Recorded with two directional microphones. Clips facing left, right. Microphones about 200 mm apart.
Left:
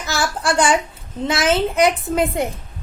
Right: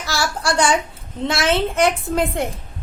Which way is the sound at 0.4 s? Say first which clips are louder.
Left 1 dB; 5° left (ahead or behind).